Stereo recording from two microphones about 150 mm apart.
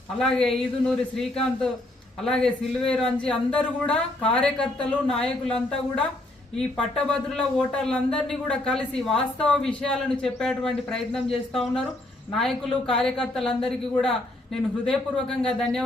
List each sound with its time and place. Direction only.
0.2 s speech: 5° left (ahead or behind)
6.6 s speech: 5° left (ahead or behind)